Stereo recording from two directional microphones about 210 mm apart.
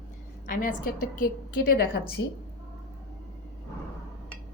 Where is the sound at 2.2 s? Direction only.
55° left (ahead or behind).